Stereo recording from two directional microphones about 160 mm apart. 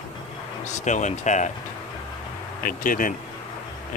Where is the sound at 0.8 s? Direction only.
50° left (ahead or behind).